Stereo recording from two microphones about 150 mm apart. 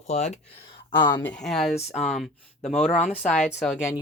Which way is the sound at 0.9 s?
35° left (ahead or behind).